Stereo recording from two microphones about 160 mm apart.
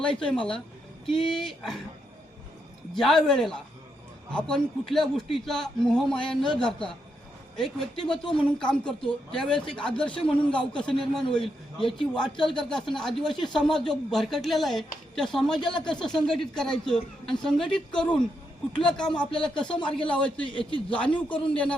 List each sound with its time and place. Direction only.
0.0 s speech: 5° left (ahead or behind)
2.9 s speech: centre (ahead or behind)
10.2 s a man's voice: 35° left (ahead or behind)
10.6 s speech: 5° left (ahead or behind)
20.5 s a man's voice: 30° left (ahead or behind)
20.9 s speech: 10° left (ahead or behind)